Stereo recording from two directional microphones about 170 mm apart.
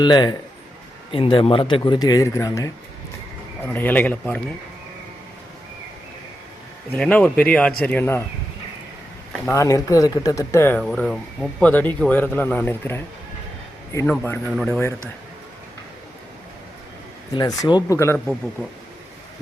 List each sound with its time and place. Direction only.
0.0 s speech: 25° left (ahead or behind); by 4.4 s 10° left (ahead or behind)
6.9 s speech: 5° left (ahead or behind)
9.6 s speech: 20° left (ahead or behind)
14.1 s speech: 10° left (ahead or behind)
17.3 s speech: 25° left (ahead or behind)